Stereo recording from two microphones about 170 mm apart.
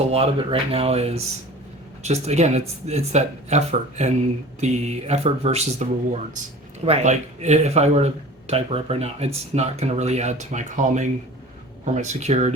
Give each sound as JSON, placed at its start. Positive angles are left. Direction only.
{"t": 0.0, "sound": "speech", "side_deg": -35}
{"t": 6.8, "sound": "speech", "side_deg": -40}